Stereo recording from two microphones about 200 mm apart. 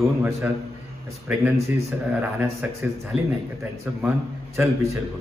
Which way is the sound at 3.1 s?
30° left (ahead or behind).